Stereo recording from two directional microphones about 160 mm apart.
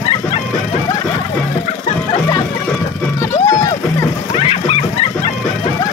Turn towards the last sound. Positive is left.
turn(degrees=40)  # may be behind; listen again after turning